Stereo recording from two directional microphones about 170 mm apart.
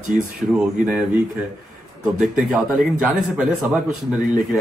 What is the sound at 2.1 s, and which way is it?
A man's voice, 5° right (ahead or behind).